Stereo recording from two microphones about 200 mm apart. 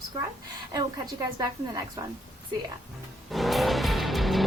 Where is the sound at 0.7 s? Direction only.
20° right (ahead or behind).